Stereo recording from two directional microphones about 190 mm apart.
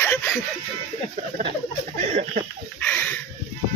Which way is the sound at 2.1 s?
40° right (ahead or behind).